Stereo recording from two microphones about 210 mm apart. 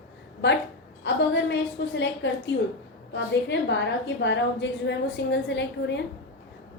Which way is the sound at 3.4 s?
55° left (ahead or behind).